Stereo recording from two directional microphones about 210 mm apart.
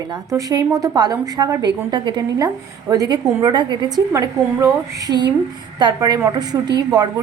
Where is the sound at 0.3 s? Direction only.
15° right (ahead or behind).